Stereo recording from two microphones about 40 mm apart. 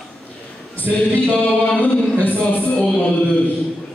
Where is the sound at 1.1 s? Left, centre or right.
Left.